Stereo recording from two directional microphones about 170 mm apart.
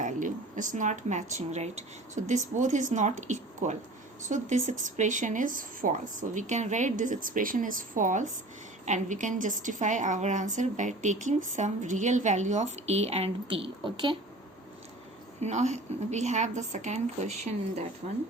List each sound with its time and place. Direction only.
0.0 s a woman's voice: 50° right (ahead or behind); by 14.2 s 30° right (ahead or behind)
15.4 s a woman's voice: 45° right (ahead or behind)